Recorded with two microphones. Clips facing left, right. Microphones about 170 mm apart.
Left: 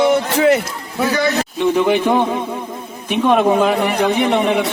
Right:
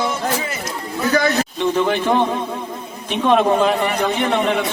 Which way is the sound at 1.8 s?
10° left (ahead or behind).